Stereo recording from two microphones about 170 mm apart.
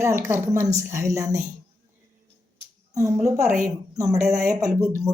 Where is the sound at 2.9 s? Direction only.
20° right (ahead or behind).